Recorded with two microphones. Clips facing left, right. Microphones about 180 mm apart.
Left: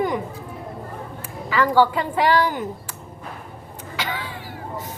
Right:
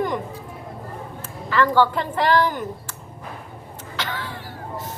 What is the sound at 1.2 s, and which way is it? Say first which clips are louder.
A woman's voice: right 1 dB; 10° left (ahead or behind).